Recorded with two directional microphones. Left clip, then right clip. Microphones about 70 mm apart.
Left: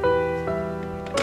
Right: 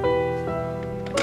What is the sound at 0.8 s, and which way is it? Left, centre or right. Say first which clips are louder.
Music: even; centre.